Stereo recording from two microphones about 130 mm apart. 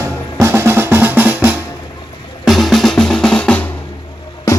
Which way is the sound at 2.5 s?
Centre (ahead or behind).